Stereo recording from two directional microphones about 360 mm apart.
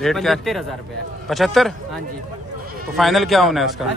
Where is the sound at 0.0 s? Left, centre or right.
Centre.